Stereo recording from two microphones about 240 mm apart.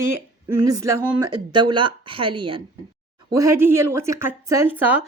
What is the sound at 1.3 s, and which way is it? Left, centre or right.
A woman's voice, centre.